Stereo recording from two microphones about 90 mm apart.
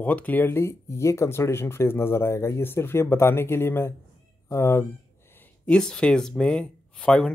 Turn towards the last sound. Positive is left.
turn(degrees=5)  # may be behind; listen again after turning